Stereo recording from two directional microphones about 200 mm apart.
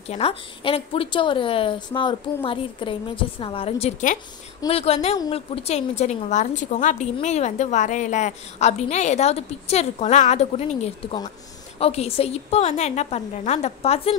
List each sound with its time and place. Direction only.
0.1 s a woman's voice: 30° left (ahead or behind)
3.8 s a woman's voice: 40° left (ahead or behind)